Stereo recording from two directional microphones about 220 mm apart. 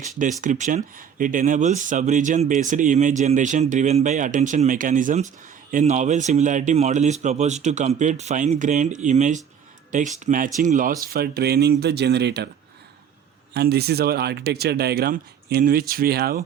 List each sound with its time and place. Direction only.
0.4 s speech: 35° right (ahead or behind)
13.5 s speech: 45° right (ahead or behind)